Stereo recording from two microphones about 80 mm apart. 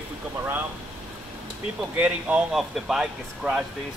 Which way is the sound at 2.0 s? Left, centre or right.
Centre.